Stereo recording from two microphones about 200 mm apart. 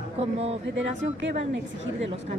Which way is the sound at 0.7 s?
70° right (ahead or behind).